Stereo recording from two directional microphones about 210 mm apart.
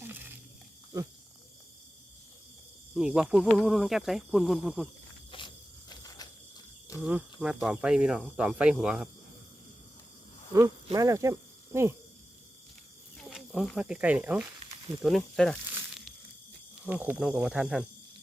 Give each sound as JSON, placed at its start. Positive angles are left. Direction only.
{"t": 2.9, "sound": "speech", "side_deg": -5}
{"t": 5.3, "sound": "insect", "side_deg": 25}
{"t": 5.9, "sound": "cricket", "side_deg": 20}
{"t": 7.0, "sound": "speech", "side_deg": -5}
{"t": 10.9, "sound": "speech", "side_deg": -15}
{"t": 13.1, "sound": "speech", "side_deg": 0}
{"t": 16.8, "sound": "speech", "side_deg": -5}